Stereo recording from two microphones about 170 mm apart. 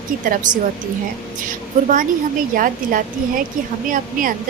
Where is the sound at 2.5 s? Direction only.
55° right (ahead or behind).